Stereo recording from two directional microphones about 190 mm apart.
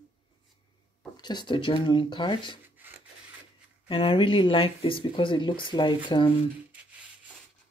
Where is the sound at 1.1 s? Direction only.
20° left (ahead or behind).